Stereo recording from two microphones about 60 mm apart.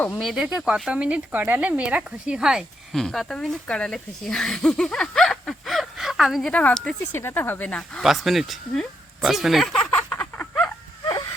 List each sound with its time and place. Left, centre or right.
0.2 s speech: centre
0.4 s speech: centre
2.9 s speech: centre
6.5 s speech: left
7.2 s speech: left
7.7 s speech: centre
8.0 s speech: centre
9.7 s a sound: centre
10.1 s a sound: left